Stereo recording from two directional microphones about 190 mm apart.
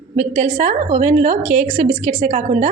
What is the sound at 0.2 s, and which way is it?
A woman's voice, 40° right (ahead or behind).